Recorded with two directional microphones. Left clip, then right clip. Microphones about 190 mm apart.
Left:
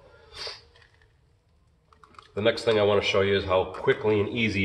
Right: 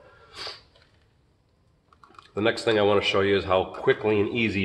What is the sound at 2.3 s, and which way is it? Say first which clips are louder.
Speech: even; 45° right (ahead or behind).